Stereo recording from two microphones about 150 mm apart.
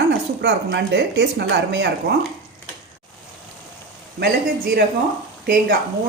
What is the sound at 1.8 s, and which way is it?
Speech, 90° right.